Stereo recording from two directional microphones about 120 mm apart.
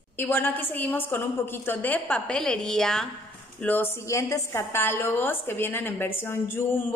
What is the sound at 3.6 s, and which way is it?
A woman's voice, 20° left (ahead or behind).